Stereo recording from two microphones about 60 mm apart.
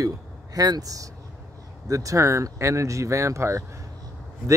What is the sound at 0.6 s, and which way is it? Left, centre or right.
Speech, right.